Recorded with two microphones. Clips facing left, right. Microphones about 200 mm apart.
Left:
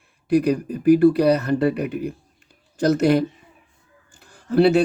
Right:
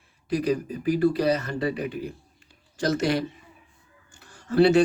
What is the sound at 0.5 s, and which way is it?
Speech, 55° left (ahead or behind).